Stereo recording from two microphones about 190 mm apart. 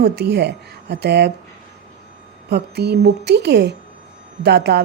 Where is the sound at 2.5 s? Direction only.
60° right (ahead or behind).